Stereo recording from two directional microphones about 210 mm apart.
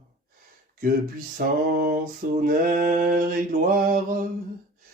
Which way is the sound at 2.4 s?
40° right (ahead or behind).